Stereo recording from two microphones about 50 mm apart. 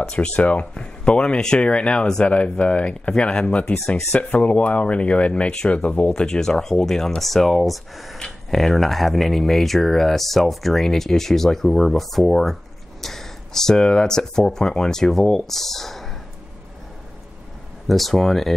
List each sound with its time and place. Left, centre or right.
0.0 s speech: centre
0.7 s speech: centre
6.0 s speech: centre
17.8 s speech: centre